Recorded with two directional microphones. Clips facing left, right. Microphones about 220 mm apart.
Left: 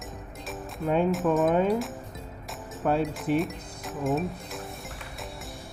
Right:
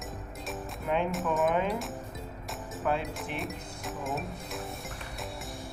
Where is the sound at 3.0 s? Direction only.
Centre (ahead or behind).